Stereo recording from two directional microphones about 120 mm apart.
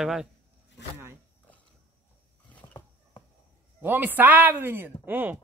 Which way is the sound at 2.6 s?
40° left (ahead or behind).